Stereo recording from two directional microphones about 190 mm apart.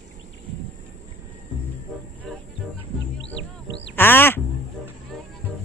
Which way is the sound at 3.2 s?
70° left (ahead or behind).